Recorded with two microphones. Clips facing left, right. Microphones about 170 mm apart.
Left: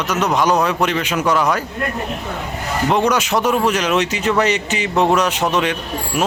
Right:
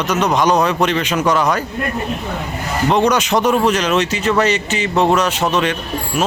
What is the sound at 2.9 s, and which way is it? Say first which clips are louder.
Speech: right 2 dB; 5° left (ahead or behind).